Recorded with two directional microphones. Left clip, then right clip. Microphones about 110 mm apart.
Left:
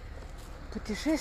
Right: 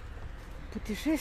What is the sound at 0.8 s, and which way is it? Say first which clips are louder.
Speech: left 1 dB; 60° right (ahead or behind).